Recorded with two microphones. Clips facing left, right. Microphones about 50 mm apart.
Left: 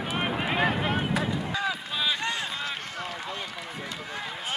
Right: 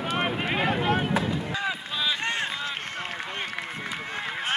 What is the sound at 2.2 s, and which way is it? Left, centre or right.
Run, right.